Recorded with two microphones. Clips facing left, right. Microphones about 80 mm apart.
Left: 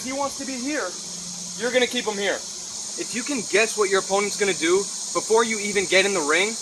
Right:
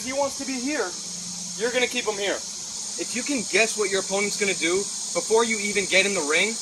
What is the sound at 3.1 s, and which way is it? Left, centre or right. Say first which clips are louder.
Speech: left 2 dB; left.